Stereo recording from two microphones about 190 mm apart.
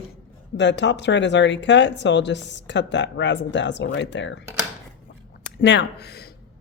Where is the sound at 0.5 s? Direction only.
70° left (ahead or behind).